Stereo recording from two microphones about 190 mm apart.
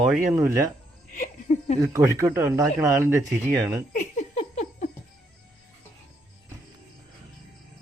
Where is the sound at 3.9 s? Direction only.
40° left (ahead or behind).